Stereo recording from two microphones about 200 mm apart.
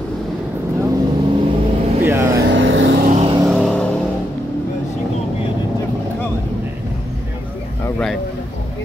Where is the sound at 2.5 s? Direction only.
70° right (ahead or behind).